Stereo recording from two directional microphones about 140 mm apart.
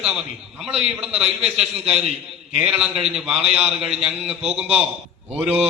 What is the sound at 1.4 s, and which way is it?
Speech, 45° right (ahead or behind).